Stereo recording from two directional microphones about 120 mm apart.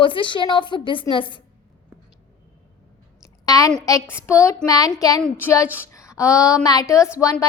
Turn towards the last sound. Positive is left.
turn(degrees=30)  # may be behind; listen again after turning